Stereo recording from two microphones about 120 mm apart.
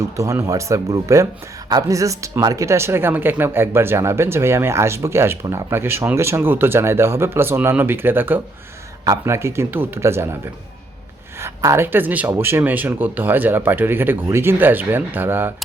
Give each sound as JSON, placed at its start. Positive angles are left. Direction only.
{"t": 0.2, "sound": "speech", "side_deg": -25}
{"t": 11.3, "sound": "speech", "side_deg": -25}